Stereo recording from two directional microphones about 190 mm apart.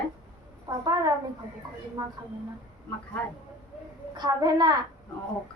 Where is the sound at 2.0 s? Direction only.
20° right (ahead or behind).